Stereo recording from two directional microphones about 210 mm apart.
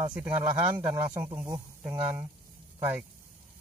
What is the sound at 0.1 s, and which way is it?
Speech, 5° right (ahead or behind).